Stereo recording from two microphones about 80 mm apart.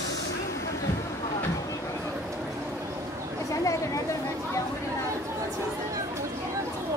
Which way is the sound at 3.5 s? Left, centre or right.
Left.